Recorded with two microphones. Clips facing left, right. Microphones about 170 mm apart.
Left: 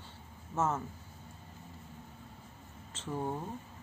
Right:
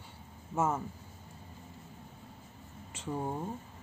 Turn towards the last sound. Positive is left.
turn(degrees=-10)  # may be behind; listen again after turning